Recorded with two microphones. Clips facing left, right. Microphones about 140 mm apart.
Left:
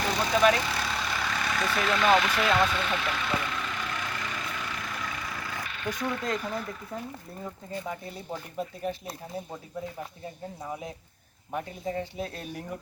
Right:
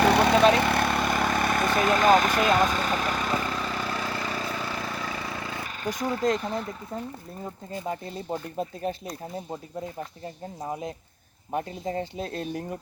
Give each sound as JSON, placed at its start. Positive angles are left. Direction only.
{"t": 0.0, "sound": "vehicle", "side_deg": -65}
{"t": 5.6, "sound": "speech", "side_deg": -40}
{"t": 7.4, "sound": "speech", "side_deg": -20}
{"t": 8.3, "sound": "speech", "side_deg": -35}
{"t": 11.5, "sound": "speech", "side_deg": -35}